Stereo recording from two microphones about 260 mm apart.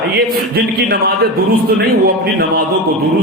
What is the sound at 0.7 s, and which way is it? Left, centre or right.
Speech, right.